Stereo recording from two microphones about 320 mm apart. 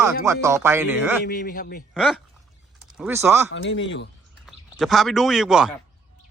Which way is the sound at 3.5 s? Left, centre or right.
Left.